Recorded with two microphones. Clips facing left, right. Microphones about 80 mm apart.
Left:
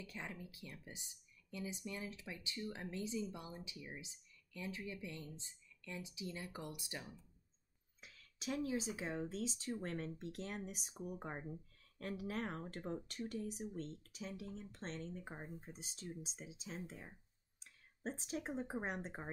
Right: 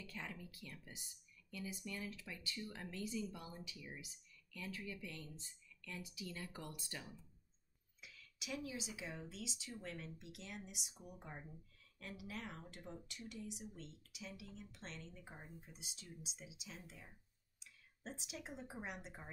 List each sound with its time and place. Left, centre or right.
0.0 s speech: centre
8.0 s speech: left